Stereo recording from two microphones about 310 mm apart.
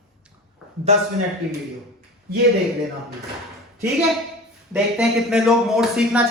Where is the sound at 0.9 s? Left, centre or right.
Right.